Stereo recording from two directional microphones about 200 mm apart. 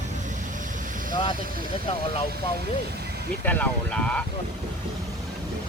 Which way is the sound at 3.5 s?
10° left (ahead or behind).